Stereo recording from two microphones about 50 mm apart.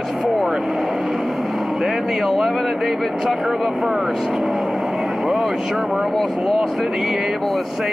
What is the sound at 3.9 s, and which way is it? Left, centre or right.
Vehicle, centre.